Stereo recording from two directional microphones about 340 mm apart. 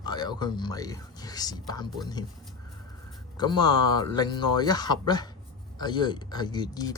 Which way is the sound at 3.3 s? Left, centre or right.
Centre.